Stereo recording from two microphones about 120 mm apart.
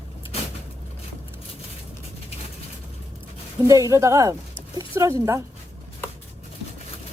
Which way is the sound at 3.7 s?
25° right (ahead or behind).